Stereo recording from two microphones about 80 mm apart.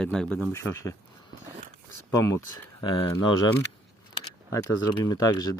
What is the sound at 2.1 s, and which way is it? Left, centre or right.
Speech, left.